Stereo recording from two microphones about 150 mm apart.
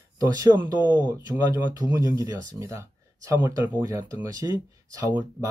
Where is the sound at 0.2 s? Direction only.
25° right (ahead or behind).